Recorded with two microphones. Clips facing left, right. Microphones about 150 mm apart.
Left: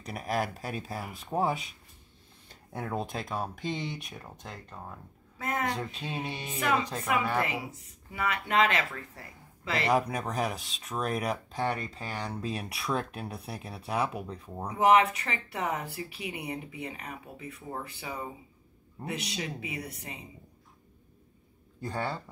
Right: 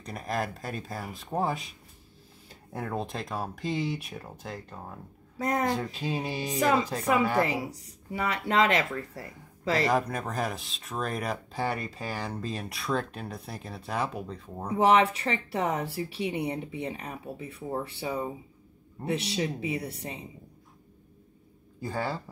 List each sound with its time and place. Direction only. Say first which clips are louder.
0.0 s speech: left 1 dB; 5° left (ahead or behind)
2.7 s speech: right 1 dB; centre (ahead or behind)
5.4 s speech: right 5 dB; 35° right (ahead or behind)
6.1 s speech: right 2 dB; 5° right (ahead or behind)
6.4 s speech: right 4 dB; 35° right (ahead or behind)
9.8 s speech: even; centre (ahead or behind)
14.8 s speech: right 1 dB; 30° right (ahead or behind)
21.8 s speech: right 2 dB; 5° right (ahead or behind)